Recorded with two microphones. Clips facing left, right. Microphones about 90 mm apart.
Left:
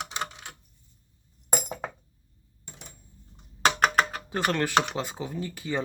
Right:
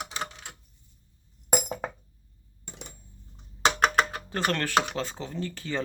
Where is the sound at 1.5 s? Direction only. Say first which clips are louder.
Right 3 dB; centre (ahead or behind).